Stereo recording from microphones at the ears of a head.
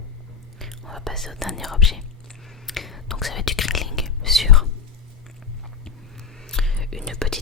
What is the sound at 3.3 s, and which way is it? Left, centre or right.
Whispering, left.